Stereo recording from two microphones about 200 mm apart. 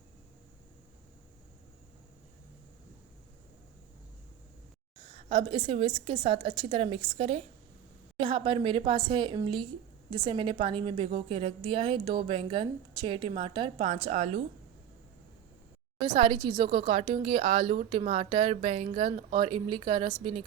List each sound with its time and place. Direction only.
5.3 s a woman's voice: 25° right (ahead or behind)
16.0 s a woman's voice: 25° right (ahead or behind)